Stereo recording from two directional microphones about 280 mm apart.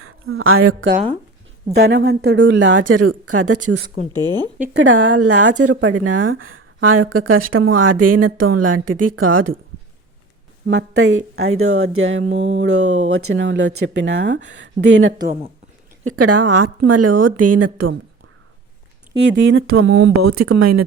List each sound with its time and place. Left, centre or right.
0.0 s a woman's voice: right
3.0 s speech: right
3.8 s speech: centre
4.6 s a woman's voice: right
10.7 s speech: right
16.0 s a woman's voice: right
19.1 s speech: right
20.2 s speech: right